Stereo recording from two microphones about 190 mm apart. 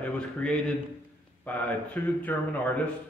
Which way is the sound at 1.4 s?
10° left (ahead or behind).